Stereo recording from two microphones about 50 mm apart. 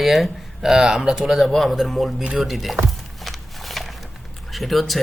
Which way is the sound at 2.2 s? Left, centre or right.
Centre.